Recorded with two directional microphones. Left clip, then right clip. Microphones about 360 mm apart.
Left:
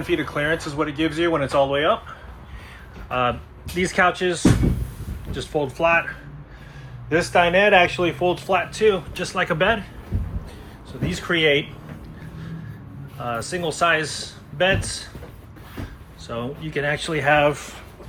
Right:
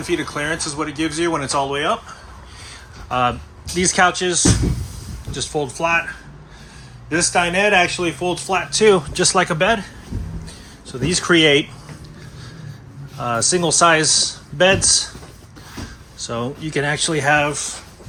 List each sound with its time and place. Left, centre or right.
0.0 s speech: centre
8.8 s speech: centre
11.0 s speech: centre
13.1 s speech: centre
16.2 s speech: centre